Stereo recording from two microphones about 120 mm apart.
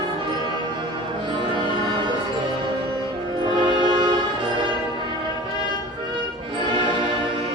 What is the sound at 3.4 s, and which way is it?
Music, 40° right (ahead or behind).